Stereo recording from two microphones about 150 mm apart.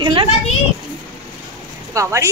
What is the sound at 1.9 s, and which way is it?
Speech, 20° right (ahead or behind).